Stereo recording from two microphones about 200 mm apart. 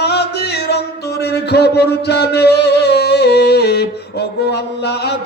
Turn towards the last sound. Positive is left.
turn(degrees=55)  # may be behind; listen again after turning